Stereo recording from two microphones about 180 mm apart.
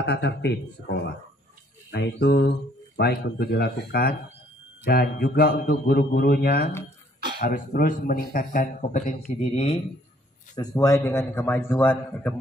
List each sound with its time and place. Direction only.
0.0 s speech: 70° left (ahead or behind)
1.9 s a man's voice: 65° left (ahead or behind); by 9.1 s 45° left (ahead or behind)
9.4 s speech: 35° left (ahead or behind)
10.5 s a man's voice: 20° left (ahead or behind)